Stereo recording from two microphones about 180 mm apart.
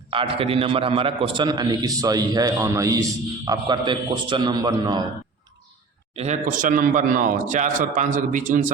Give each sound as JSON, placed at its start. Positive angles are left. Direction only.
{"t": 0.1, "sound": "a man's voice", "side_deg": -30}
{"t": 6.1, "sound": "a man's voice", "side_deg": -40}